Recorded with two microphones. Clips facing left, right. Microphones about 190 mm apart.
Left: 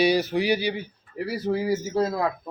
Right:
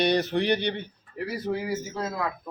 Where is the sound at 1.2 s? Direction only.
30° left (ahead or behind).